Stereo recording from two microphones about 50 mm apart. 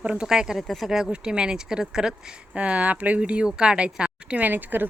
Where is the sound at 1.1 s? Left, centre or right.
Centre.